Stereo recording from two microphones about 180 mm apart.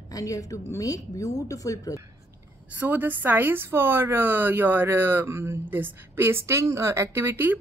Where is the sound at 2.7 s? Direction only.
10° right (ahead or behind).